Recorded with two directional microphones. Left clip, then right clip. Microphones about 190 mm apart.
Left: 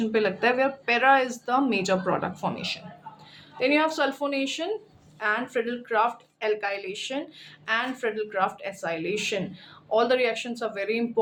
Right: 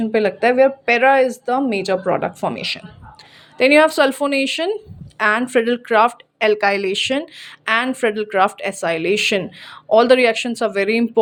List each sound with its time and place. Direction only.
0.0 s speech: 30° right (ahead or behind); by 11.2 s 50° right (ahead or behind)